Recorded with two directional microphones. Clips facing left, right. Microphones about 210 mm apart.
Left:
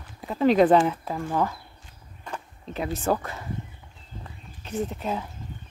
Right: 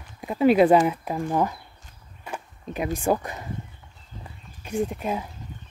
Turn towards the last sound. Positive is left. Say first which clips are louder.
# right 2 dB
turn(degrees=-10)  # may be behind; listen again after turning